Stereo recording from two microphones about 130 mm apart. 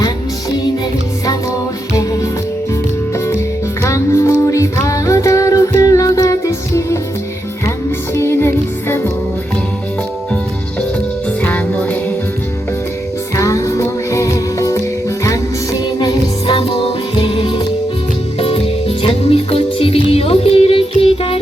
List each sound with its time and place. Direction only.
3.8 s music: 25° left (ahead or behind)
8.1 s music: 20° left (ahead or behind)
11.4 s music: 10° left (ahead or behind)
13.3 s music: 25° left (ahead or behind)
16.0 s music: 35° left (ahead or behind)